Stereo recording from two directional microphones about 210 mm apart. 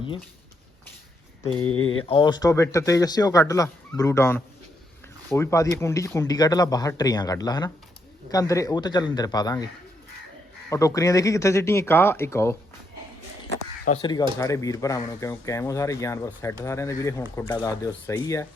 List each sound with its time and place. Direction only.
1.6 s speech: 90° left
2.0 s speech: 20° left (ahead or behind)
10.7 s speech: 15° left (ahead or behind)
14.0 s speech: 20° left (ahead or behind)